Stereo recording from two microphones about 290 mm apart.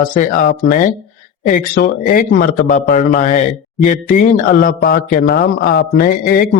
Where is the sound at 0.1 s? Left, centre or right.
Left.